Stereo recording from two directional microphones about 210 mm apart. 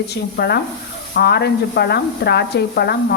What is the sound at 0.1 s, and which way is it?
Speech, 50° left (ahead or behind).